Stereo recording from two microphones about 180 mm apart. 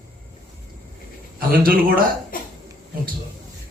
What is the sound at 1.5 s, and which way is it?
Speech, 55° right (ahead or behind).